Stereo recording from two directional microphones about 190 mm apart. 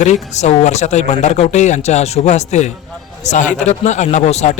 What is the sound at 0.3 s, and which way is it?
Speech, 35° left (ahead or behind).